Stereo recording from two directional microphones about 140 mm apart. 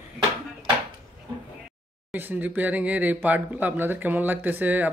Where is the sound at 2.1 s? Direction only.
10° right (ahead or behind).